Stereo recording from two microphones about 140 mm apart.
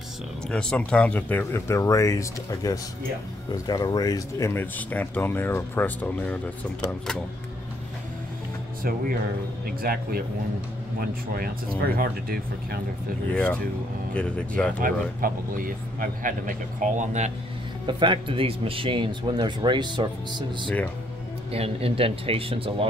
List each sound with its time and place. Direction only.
0.5 s speech: 5° left (ahead or behind)
9.7 s speech: 90° right
13.3 s speech: 10° left (ahead or behind)
14.8 s speech: 90° right; by 17.3 s 60° right (ahead or behind)
17.8 s speech: 35° right (ahead or behind)
20.6 s speech: 10° left (ahead or behind)
21.5 s speech: 45° right (ahead or behind)